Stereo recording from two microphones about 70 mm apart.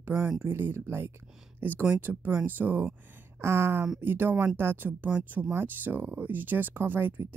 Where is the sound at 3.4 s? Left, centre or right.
Right.